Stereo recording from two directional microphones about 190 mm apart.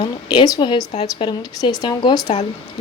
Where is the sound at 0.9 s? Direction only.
35° left (ahead or behind).